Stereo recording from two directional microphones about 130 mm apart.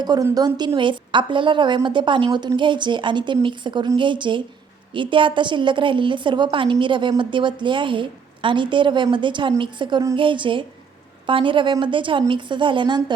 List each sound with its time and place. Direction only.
0.0 s a woman's voice: 30° right (ahead or behind)